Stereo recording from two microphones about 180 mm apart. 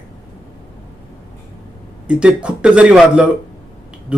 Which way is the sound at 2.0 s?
5° right (ahead or behind).